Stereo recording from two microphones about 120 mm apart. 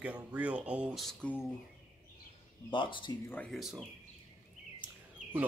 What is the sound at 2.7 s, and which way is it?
Speech, 45° left (ahead or behind).